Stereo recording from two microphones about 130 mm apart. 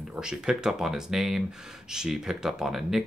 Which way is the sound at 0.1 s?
5° right (ahead or behind).